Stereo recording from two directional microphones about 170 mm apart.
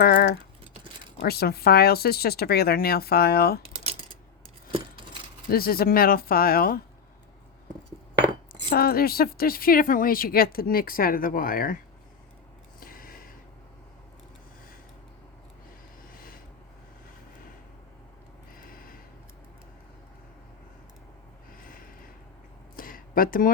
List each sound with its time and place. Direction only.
0.0 s typing: 65° left (ahead or behind)
1.2 s speech: 65° left (ahead or behind)
3.6 s typing: 35° right (ahead or behind)
5.5 s speech: 60° left (ahead or behind)
8.7 s speech: 60° left (ahead or behind)
12.8 s a sound: 55° left (ahead or behind)
16.1 s a sound: 60° left (ahead or behind)
18.5 s snort: 55° left (ahead or behind)
21.6 s a sound: 55° left (ahead or behind)